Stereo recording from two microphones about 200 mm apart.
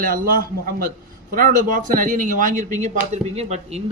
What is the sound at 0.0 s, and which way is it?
A man's voice, 45° right (ahead or behind).